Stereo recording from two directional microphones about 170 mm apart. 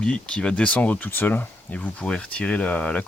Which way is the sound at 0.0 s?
5° left (ahead or behind).